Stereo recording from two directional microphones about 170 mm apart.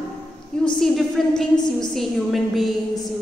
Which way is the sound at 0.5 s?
5° left (ahead or behind).